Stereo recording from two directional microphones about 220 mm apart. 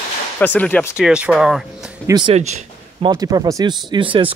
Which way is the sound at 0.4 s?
5° left (ahead or behind).